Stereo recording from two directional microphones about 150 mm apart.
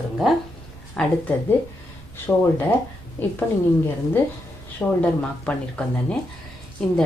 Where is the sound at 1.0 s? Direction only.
5° left (ahead or behind).